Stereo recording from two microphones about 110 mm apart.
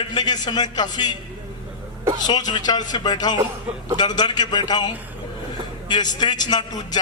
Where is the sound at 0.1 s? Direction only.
40° left (ahead or behind).